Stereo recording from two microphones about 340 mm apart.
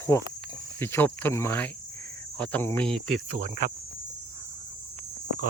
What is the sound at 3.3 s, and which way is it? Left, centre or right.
Speech, right.